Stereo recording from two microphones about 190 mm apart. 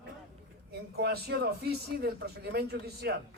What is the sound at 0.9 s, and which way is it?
Speech, 55° right (ahead or behind).